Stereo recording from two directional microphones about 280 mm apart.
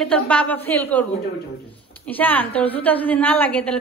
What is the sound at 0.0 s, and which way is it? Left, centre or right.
A woman's voice, centre.